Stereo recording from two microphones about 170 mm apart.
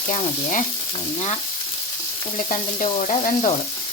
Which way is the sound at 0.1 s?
45° left (ahead or behind).